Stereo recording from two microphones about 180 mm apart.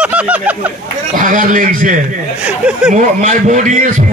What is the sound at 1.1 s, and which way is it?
Speech, 45° right (ahead or behind).